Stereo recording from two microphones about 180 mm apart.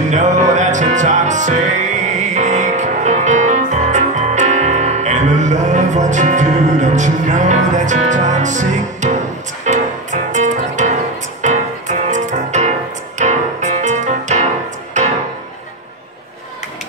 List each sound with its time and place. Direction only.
0.1 s music: 45° right (ahead or behind)